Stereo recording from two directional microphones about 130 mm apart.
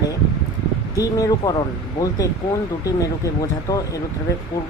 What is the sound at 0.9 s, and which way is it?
Speech, 25° left (ahead or behind).